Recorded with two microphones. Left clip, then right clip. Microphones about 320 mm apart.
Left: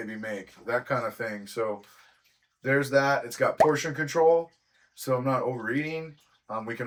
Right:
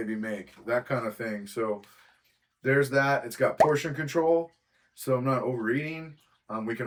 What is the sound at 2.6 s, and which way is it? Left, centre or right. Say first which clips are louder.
Speech: left 1 dB; centre.